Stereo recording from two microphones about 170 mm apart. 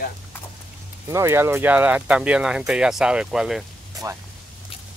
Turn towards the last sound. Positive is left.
turn(degrees=-20)  # may be behind; listen again after turning